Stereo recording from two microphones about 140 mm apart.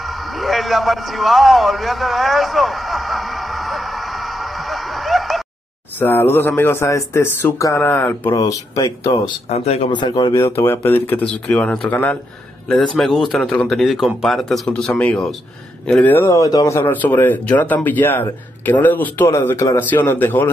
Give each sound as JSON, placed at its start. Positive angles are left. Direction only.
{"t": 0.0, "sound": "a sound", "side_deg": 0}
{"t": 5.9, "sound": "speech", "side_deg": 15}
{"t": 8.4, "sound": "speech", "side_deg": 25}
{"t": 9.5, "sound": "speech", "side_deg": 50}
{"t": 9.8, "sound": "speech", "side_deg": 35}
{"t": 16.3, "sound": "speech", "side_deg": 25}